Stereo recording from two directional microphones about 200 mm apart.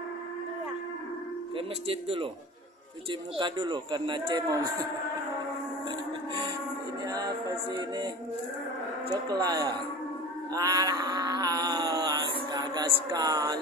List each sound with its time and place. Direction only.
1.9 s a man's voice: 25° right (ahead or behind)
5.9 s music: 25° right (ahead or behind)
9.3 s a man's voice: 20° right (ahead or behind)
10.5 s a sound: 20° right (ahead or behind)